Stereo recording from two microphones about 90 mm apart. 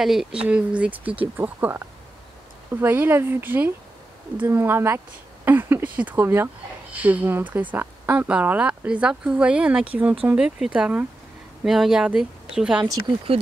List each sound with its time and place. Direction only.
0.0 s speech: 5° right (ahead or behind)